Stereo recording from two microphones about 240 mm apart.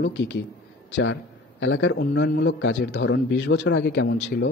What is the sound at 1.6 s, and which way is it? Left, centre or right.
A man's voice, left.